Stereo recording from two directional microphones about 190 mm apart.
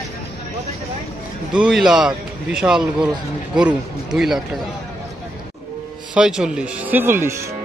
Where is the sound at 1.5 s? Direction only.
5° right (ahead or behind).